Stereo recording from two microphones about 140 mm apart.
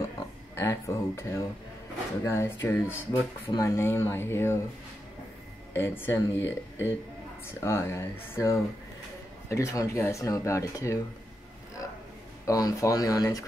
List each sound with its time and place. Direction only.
0.6 s speech: 20° left (ahead or behind)
5.8 s speech: 15° left (ahead or behind)
12.4 s speech: 25° left (ahead or behind)